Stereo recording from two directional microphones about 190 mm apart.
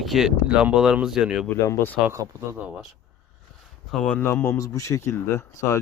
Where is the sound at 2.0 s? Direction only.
15° right (ahead or behind).